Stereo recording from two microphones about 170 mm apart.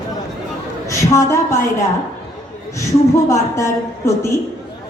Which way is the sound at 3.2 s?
15° left (ahead or behind).